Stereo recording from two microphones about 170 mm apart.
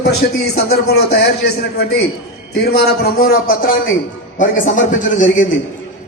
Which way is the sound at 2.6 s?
65° left (ahead or behind).